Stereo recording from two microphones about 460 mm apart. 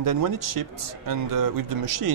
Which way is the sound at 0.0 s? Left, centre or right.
Right.